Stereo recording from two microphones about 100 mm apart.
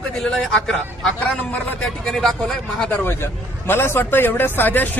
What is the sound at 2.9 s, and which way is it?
A man's voice, 20° left (ahead or behind).